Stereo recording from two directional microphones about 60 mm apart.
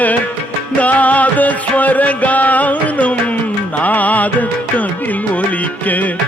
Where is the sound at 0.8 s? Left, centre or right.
Left.